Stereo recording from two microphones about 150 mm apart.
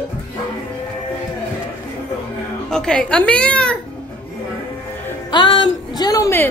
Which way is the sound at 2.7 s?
5° left (ahead or behind).